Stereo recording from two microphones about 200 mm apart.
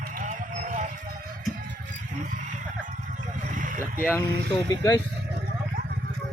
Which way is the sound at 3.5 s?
40° right (ahead or behind).